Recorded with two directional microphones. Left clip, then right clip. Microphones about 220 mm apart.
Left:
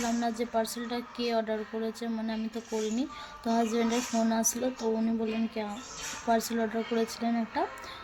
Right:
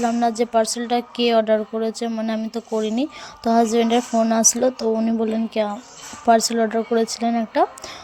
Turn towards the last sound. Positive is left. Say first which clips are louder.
# right 11 dB
turn(degrees=-35)  # may be behind; listen again after turning